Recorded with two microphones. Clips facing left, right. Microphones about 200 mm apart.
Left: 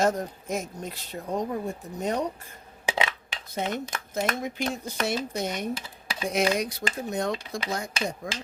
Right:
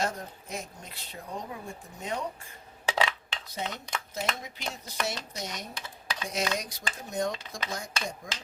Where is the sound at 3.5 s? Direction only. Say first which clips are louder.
Left 6 dB; 50° left (ahead or behind).